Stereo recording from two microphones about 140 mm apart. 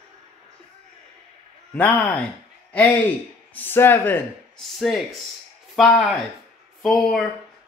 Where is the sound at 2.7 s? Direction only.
10° left (ahead or behind).